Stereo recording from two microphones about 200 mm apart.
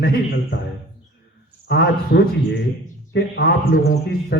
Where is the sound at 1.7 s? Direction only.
55° left (ahead or behind).